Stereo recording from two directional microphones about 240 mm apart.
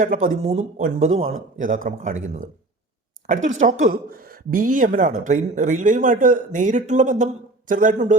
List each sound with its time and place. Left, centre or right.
0.0 s speech: right